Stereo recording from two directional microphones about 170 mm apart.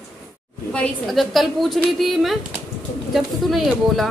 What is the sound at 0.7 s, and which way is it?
A woman's voice, 5° left (ahead or behind).